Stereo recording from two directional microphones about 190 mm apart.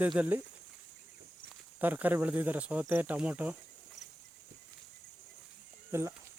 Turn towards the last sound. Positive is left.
turn(degrees=-15)  # may be behind; listen again after turning